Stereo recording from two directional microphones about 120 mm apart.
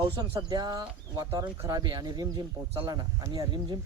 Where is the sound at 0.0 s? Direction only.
35° right (ahead or behind).